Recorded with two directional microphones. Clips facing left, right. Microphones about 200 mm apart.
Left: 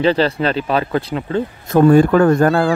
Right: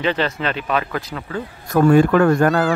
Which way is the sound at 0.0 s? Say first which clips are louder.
Left 6 dB; 35° left (ahead or behind).